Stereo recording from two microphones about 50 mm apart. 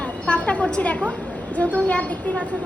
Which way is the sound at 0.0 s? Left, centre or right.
Left.